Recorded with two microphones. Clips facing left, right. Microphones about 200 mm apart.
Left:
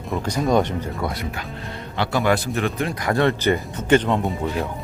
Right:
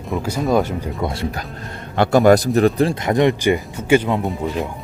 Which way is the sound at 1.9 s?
45° right (ahead or behind).